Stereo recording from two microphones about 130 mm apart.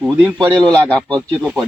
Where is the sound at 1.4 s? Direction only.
5° right (ahead or behind).